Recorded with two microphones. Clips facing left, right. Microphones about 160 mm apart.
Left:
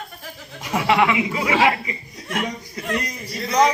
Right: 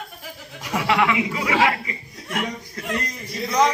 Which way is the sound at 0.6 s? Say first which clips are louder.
Left 2 dB; 25° left (ahead or behind).